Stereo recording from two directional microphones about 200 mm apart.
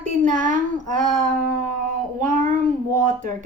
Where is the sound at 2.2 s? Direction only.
40° right (ahead or behind).